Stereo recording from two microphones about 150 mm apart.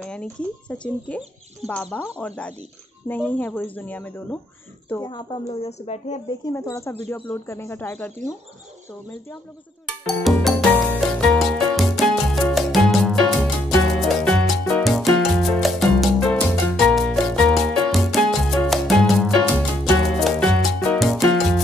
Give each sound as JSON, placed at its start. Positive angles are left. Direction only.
{"t": 0.0, "sound": "speech", "side_deg": 5}
{"t": 5.0, "sound": "speech", "side_deg": 30}
{"t": 6.5, "sound": "speech", "side_deg": 20}
{"t": 10.2, "sound": "music", "side_deg": 0}